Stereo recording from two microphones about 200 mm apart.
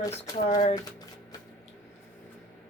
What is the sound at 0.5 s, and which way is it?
Speech, 35° left (ahead or behind).